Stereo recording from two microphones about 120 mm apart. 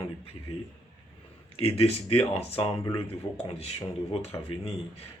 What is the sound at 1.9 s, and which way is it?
Speech, 60° left (ahead or behind).